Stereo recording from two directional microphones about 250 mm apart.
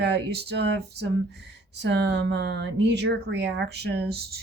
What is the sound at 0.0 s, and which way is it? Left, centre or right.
Speech, right.